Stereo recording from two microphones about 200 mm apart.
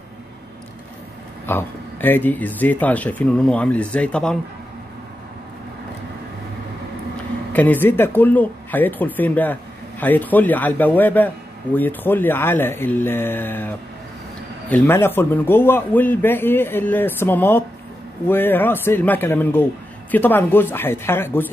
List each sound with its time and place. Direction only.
1.4 s speech: 10° left (ahead or behind)
7.5 s speech: 10° left (ahead or behind)